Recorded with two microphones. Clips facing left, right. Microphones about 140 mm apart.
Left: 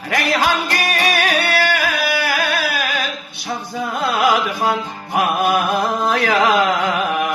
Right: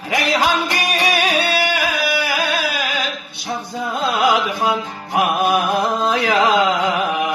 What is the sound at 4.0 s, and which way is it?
Music, 20° right (ahead or behind).